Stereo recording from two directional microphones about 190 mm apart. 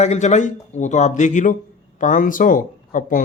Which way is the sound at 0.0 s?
35° left (ahead or behind).